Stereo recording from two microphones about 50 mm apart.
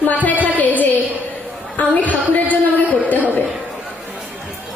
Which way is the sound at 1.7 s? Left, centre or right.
Left.